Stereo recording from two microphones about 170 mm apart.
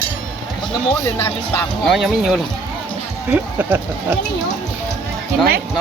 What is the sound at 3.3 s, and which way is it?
Speech, 10° right (ahead or behind).